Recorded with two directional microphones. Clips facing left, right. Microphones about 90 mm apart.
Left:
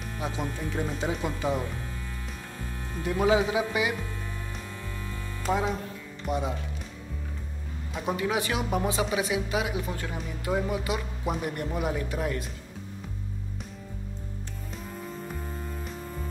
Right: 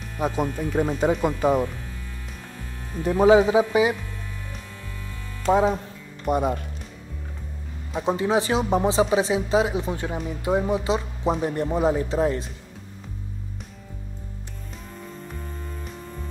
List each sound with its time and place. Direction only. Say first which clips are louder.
0.2 s speech: right 8 dB; 50° right (ahead or behind)
3.0 s speech: right 8 dB; 35° right (ahead or behind)
5.5 s speech: right 8 dB; 30° right (ahead or behind)
6.2 s speech: right 7 dB; 50° right (ahead or behind)
8.0 s speech: right 6 dB; 25° right (ahead or behind)